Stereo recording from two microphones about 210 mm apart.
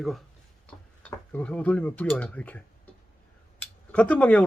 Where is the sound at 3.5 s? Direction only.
5° left (ahead or behind).